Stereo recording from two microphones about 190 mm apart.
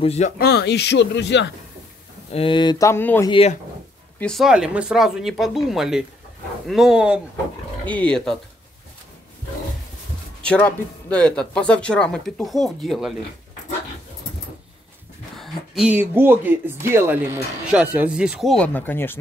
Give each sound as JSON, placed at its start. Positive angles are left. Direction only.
{"t": 0.0, "sound": "speech", "side_deg": 35}
{"t": 0.4, "sound": "speech", "side_deg": 60}
{"t": 2.3, "sound": "speech", "side_deg": 25}
{"t": 3.3, "sound": "speech", "side_deg": 30}
{"t": 4.2, "sound": "speech", "side_deg": 0}
{"t": 7.8, "sound": "speech", "side_deg": 10}
{"t": 10.4, "sound": "speech", "side_deg": 5}
{"t": 15.3, "sound": "speech", "side_deg": 0}